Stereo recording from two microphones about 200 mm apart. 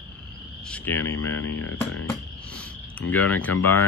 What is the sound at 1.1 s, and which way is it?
Speech, 90° left.